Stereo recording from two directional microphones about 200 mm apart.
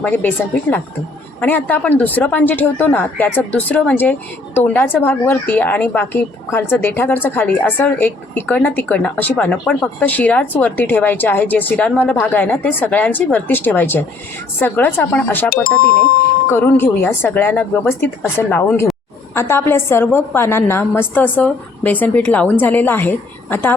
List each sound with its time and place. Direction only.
0.0 s speech: 10° left (ahead or behind)
15.6 s speech: 45° left (ahead or behind)
16.5 s speech: 10° left (ahead or behind)